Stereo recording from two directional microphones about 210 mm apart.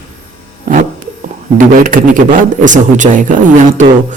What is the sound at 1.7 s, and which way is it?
A man's voice, 40° right (ahead or behind).